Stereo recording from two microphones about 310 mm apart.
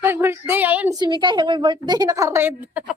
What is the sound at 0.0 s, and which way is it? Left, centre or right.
A woman's voice, centre.